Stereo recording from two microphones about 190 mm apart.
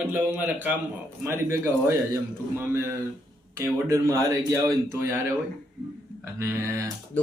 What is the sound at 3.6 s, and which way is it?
A man's voice, 15° right (ahead or behind).